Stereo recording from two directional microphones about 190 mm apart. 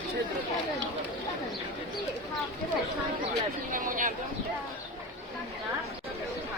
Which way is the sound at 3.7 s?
45° right (ahead or behind).